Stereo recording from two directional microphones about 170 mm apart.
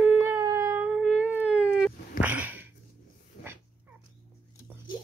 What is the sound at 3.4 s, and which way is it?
Dog, 65° left (ahead or behind).